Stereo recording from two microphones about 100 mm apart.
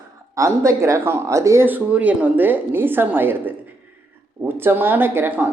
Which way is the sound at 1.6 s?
15° right (ahead or behind).